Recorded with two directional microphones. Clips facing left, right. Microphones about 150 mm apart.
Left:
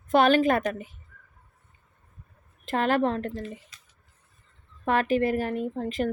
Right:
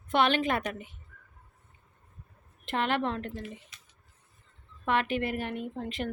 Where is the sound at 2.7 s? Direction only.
40° left (ahead or behind).